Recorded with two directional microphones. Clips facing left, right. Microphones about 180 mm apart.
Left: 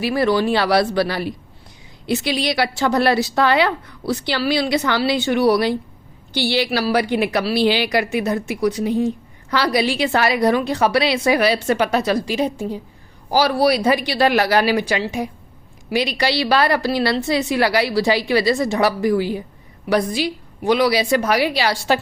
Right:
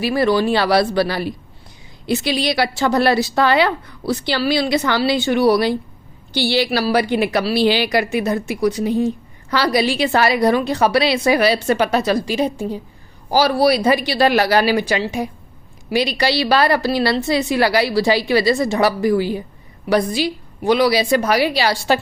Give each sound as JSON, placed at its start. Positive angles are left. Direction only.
{"t": 0.0, "sound": "a woman's voice", "side_deg": -30}